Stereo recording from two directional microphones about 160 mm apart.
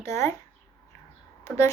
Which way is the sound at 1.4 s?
15° left (ahead or behind).